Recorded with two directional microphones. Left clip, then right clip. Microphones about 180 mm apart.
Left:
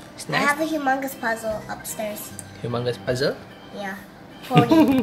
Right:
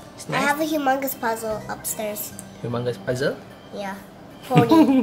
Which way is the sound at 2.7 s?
Centre (ahead or behind).